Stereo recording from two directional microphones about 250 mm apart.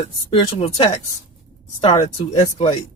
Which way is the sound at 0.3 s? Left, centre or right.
Left.